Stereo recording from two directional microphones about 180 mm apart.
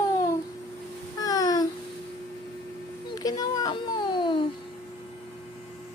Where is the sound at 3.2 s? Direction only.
20° left (ahead or behind).